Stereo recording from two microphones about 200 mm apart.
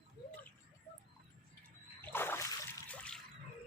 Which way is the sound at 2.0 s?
10° left (ahead or behind).